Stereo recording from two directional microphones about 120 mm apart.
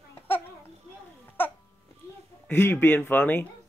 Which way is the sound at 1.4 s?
15° left (ahead or behind).